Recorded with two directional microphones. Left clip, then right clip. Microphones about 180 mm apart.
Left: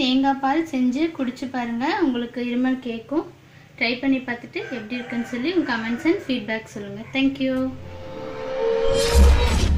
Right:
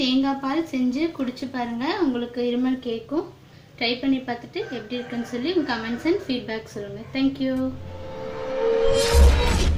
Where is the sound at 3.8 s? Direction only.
35° left (ahead or behind).